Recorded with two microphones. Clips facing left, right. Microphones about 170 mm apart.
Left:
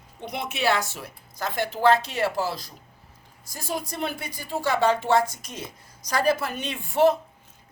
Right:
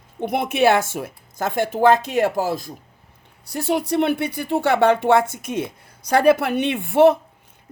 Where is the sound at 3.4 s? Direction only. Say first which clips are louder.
Right 10 dB; 65° right (ahead or behind).